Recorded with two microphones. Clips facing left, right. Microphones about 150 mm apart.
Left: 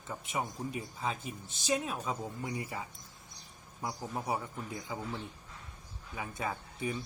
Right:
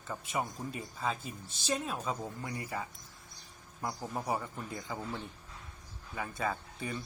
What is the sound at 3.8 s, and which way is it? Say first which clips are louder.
Speech: right 1 dB; 10° left (ahead or behind).